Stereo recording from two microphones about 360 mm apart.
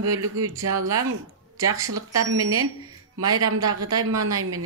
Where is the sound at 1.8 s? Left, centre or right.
Right.